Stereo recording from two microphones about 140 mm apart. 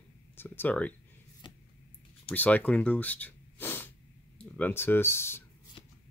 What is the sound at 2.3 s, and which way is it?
Speech, 10° left (ahead or behind).